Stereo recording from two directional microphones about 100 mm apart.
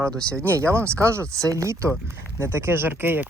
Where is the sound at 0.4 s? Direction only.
25° right (ahead or behind).